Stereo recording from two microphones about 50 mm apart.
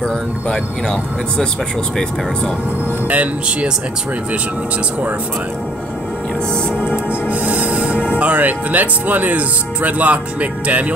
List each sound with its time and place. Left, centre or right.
0.0 s speech: centre
3.1 s speech: right
6.8 s music: right
8.2 s speech: right